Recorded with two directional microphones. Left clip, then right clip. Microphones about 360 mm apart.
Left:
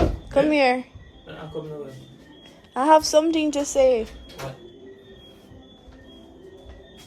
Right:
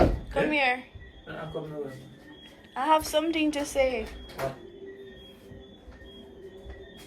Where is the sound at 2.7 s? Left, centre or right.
Centre.